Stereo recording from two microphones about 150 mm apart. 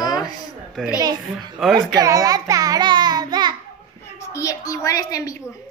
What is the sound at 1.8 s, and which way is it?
A child's voice, 25° right (ahead or behind).